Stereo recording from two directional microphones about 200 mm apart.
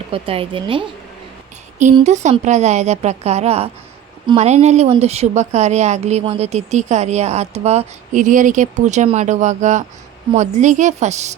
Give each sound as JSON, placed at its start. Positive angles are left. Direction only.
{"t": 0.1, "sound": "speech", "side_deg": -25}
{"t": 2.0, "sound": "a woman's voice", "side_deg": -35}